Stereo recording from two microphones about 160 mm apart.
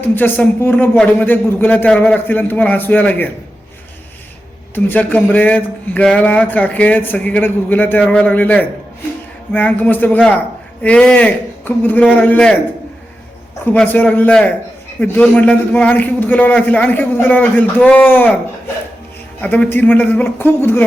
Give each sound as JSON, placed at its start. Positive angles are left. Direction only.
{"t": 0.2, "sound": "speech", "side_deg": 10}
{"t": 4.7, "sound": "speech", "side_deg": 10}
{"t": 13.7, "sound": "speech", "side_deg": 10}
{"t": 19.4, "sound": "speech", "side_deg": 10}